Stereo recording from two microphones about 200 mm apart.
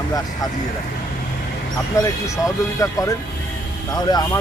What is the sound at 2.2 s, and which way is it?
Speech, 15° left (ahead or behind).